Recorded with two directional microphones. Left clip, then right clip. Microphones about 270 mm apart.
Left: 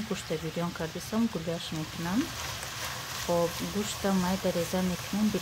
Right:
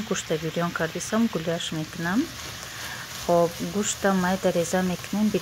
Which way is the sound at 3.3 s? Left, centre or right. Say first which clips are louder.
Right 7 dB; centre.